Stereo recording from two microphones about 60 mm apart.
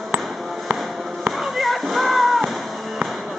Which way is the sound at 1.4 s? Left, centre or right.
Centre.